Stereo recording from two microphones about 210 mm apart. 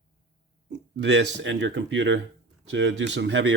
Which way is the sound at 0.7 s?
60° right (ahead or behind).